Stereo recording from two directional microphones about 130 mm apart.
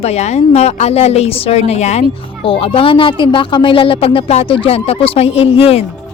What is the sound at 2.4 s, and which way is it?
A woman's voice, 45° left (ahead or behind).